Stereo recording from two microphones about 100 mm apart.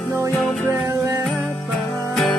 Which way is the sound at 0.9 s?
30° right (ahead or behind).